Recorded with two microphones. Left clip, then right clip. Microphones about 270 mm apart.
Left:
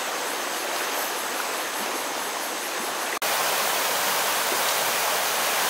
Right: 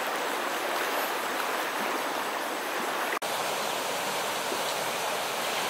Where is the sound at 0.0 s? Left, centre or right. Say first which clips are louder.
Left 2 dB; centre.